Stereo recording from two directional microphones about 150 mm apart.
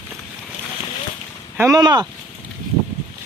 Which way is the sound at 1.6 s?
25° right (ahead or behind).